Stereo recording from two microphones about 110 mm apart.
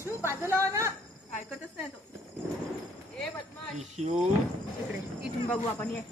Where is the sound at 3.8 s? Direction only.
85° right.